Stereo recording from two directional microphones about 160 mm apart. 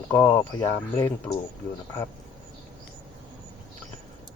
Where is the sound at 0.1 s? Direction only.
20° left (ahead or behind).